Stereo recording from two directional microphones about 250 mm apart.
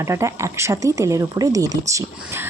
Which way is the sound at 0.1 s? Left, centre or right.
Centre.